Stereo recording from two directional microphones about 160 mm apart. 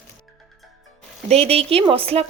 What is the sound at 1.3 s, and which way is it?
Speech, 40° right (ahead or behind).